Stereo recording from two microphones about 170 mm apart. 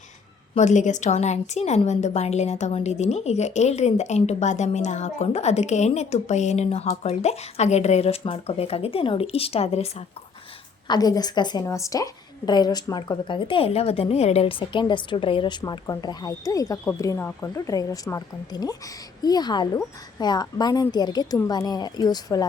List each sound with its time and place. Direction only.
0.5 s a woman's voice: 45° left (ahead or behind)
10.8 s a woman's voice: 25° left (ahead or behind)